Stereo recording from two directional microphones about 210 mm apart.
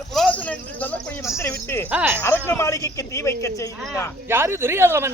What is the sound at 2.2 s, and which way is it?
A man's voice, 10° left (ahead or behind).